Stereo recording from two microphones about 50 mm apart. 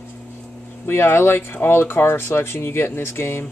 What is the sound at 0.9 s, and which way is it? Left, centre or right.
Speech, left.